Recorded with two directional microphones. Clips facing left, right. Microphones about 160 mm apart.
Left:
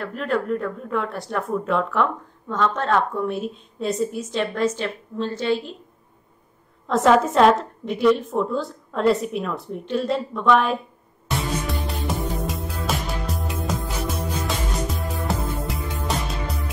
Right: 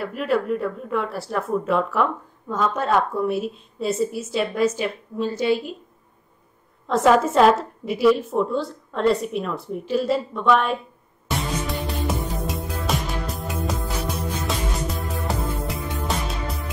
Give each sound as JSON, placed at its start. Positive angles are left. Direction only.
{"t": 0.0, "sound": "speech", "side_deg": -5}
{"t": 6.9, "sound": "speech", "side_deg": 0}
{"t": 11.2, "sound": "music", "side_deg": 0}